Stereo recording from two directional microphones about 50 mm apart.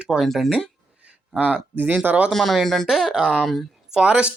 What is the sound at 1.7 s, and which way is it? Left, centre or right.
Speech, right.